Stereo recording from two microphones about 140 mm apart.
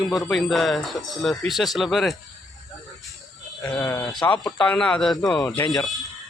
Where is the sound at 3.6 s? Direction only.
25° left (ahead or behind).